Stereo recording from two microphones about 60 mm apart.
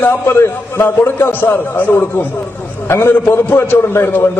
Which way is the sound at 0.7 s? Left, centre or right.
Left.